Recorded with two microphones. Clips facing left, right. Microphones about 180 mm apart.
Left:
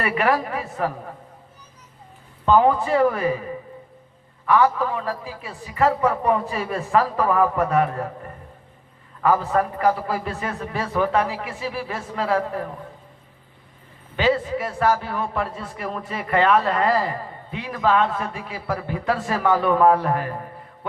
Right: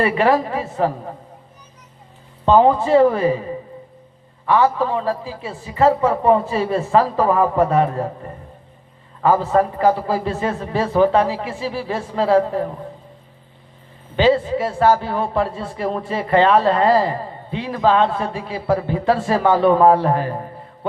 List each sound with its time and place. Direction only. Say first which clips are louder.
0.0 s a man's voice: right 5 dB; 30° right (ahead or behind)
2.4 s a man's voice: right 4 dB; 30° right (ahead or behind)
14.2 s a man's voice: right 5 dB; 30° right (ahead or behind)